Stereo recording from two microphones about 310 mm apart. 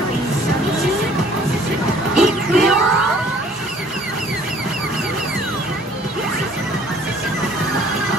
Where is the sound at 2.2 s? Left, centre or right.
Centre.